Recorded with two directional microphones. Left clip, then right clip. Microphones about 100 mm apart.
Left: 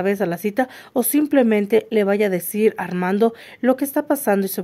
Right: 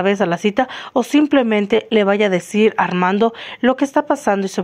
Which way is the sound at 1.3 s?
30° left (ahead or behind).